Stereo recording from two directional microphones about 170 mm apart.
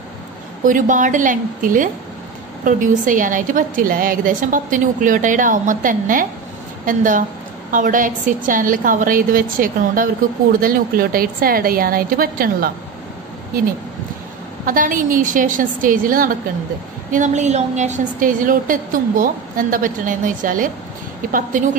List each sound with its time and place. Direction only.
0.7 s a woman's voice: 50° right (ahead or behind)
14.7 s a woman's voice: 50° right (ahead or behind)